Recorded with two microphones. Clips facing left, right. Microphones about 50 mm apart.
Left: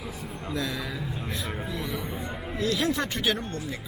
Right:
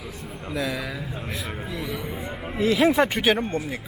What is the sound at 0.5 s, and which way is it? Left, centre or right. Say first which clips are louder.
A man's voice: right 4 dB; centre.